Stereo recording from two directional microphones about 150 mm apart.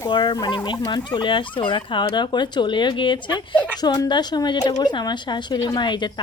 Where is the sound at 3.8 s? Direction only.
25° left (ahead or behind).